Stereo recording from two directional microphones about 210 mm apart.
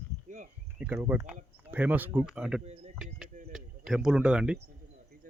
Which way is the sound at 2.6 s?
30° right (ahead or behind).